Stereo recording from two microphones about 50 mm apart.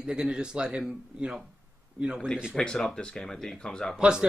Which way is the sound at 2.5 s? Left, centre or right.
Centre.